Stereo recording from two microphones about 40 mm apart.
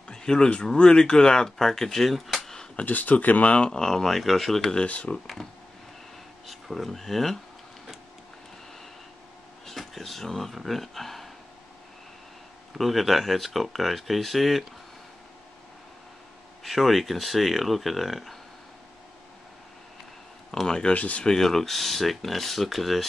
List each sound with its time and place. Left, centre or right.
0.1 s speech: centre
2.8 s speech: left
3.7 s speech: centre
4.7 s speech: left
5.2 s speech: centre
9.7 s speech: centre
12.7 s speech: centre
16.6 s speech: centre
20.8 s speech: left
21.3 s speech: centre